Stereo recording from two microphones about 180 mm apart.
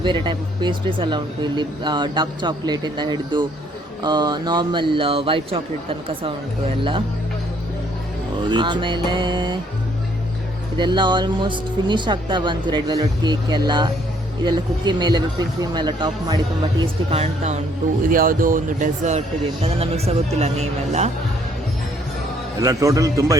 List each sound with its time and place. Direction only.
0.0 s speech: 25° right (ahead or behind)
8.4 s speech: 25° right (ahead or behind)
10.8 s speech: 25° right (ahead or behind)
16.8 s a man's voice: 35° right (ahead or behind)
18.1 s a man's voice: 50° right (ahead or behind)
22.6 s speech: 20° right (ahead or behind)